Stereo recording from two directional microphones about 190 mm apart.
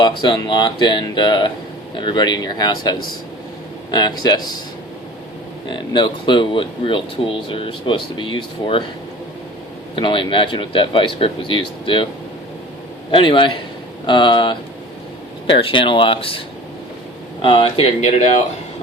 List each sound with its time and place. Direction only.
0.0 s speech: 25° left (ahead or behind)
5.6 s speech: 25° left (ahead or behind)
9.9 s speech: 25° left (ahead or behind)
13.1 s speech: 25° left (ahead or behind)
17.4 s speech: 30° left (ahead or behind)